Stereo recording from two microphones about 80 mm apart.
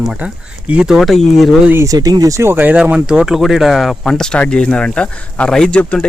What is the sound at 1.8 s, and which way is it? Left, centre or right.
Speech, right.